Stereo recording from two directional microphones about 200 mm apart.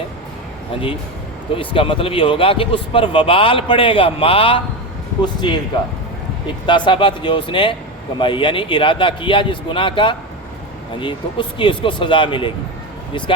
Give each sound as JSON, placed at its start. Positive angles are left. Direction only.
{"t": 1.5, "sound": "a man's voice", "side_deg": 25}
{"t": 6.7, "sound": "a man's voice", "side_deg": 25}